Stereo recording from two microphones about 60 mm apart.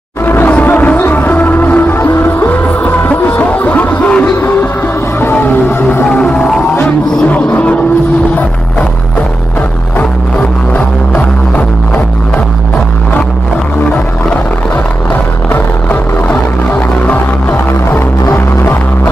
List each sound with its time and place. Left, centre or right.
0.2 s music: left
5.3 s music: left
6.0 s music: centre
7.2 s a sound: left
11.1 s music: left
15.5 s music: left